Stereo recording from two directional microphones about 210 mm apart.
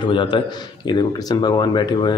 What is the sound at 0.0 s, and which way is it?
Speech, 20° left (ahead or behind).